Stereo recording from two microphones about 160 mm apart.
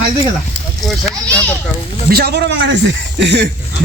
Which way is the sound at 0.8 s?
5° left (ahead or behind).